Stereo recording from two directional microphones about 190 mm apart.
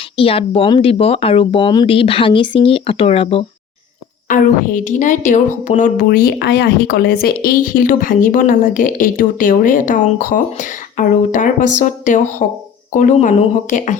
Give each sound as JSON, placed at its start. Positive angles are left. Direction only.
{"t": 0.2, "sound": "speech", "side_deg": 30}
{"t": 4.3, "sound": "a woman's voice", "side_deg": 45}